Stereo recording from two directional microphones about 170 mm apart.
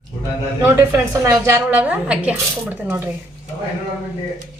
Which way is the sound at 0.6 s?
20° right (ahead or behind).